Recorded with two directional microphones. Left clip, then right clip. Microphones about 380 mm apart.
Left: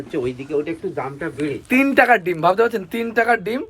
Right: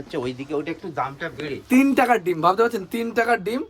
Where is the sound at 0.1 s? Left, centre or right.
Right.